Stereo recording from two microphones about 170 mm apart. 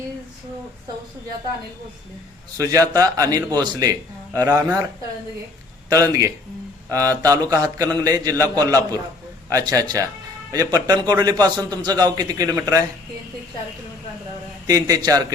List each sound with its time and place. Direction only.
2.6 s a man's voice: 20° right (ahead or behind)
5.9 s a man's voice: 20° right (ahead or behind)
14.7 s a man's voice: 20° right (ahead or behind)